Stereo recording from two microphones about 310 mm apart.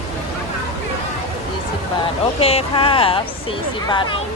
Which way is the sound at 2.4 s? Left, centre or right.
Centre.